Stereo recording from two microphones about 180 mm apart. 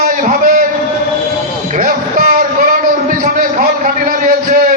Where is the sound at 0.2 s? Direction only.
45° right (ahead or behind).